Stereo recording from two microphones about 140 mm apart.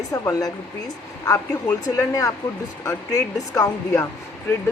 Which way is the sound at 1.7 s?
25° left (ahead or behind).